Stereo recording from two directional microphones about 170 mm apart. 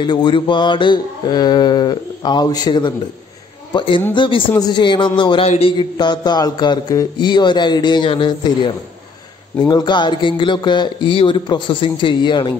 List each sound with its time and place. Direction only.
0.0 s mantra: 25° left (ahead or behind)